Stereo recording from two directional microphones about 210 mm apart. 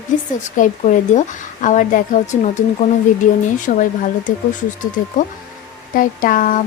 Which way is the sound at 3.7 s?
40° left (ahead or behind).